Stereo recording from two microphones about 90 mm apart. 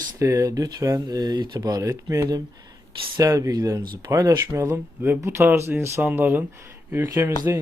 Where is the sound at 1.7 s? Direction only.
40° right (ahead or behind); by 6.4 s 20° right (ahead or behind).